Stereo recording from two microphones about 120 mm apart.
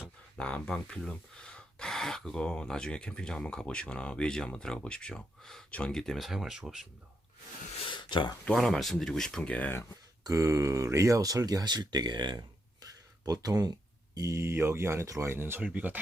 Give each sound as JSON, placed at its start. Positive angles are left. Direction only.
{"t": 0.3, "sound": "speech", "side_deg": 10}
{"t": 7.9, "sound": "a sound", "side_deg": 40}
{"t": 8.4, "sound": "speech", "side_deg": 5}
{"t": 10.2, "sound": "speech", "side_deg": -25}